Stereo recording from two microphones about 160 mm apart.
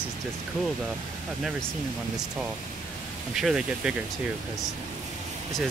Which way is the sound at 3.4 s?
5° right (ahead or behind).